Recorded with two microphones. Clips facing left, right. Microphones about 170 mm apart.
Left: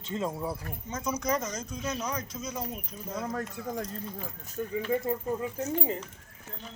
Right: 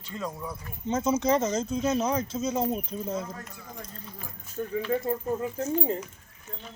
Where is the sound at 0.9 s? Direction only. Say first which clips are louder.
Right 7 dB; 25° right (ahead or behind).